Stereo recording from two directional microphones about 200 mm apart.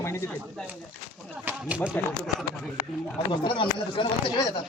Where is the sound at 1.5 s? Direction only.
5° right (ahead or behind).